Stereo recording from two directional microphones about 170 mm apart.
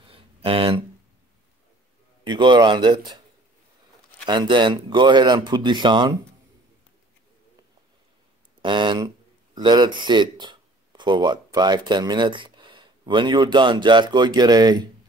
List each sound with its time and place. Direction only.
0.0 s a sound: 35° right (ahead or behind)
2.2 s speech: 25° right (ahead or behind)
4.3 s speech: 25° right (ahead or behind)
8.6 s speech: 30° right (ahead or behind)